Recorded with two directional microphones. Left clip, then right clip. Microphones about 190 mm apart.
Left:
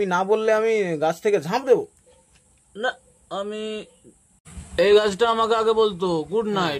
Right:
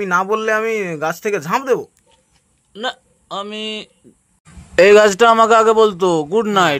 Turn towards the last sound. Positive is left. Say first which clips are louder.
# right 9 dB
turn(degrees=-35)  # may be behind; listen again after turning